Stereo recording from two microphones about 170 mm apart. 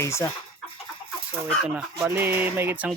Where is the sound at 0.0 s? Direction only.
15° left (ahead or behind).